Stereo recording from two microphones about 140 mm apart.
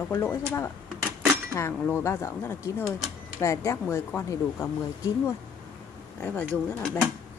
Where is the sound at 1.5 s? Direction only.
15° left (ahead or behind).